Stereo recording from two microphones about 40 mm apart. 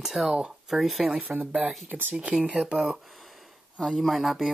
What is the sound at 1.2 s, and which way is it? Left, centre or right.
Speech, right.